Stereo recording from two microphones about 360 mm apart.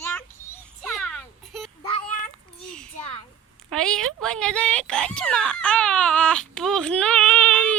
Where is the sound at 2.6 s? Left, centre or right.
Centre.